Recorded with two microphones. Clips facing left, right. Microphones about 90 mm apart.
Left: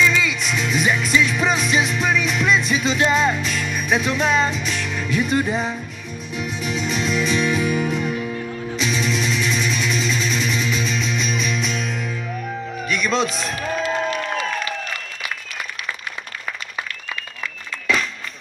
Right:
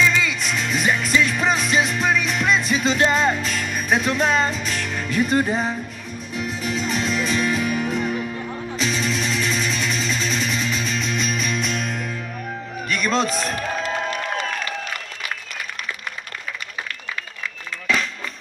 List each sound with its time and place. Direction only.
0.1 s music: 35° right (ahead or behind)
7.6 s music: 30° left (ahead or behind)
8.7 s music: 35° right (ahead or behind)